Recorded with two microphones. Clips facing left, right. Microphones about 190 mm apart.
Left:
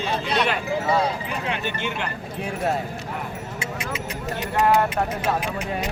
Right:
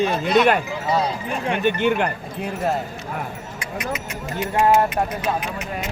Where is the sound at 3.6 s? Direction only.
25° left (ahead or behind).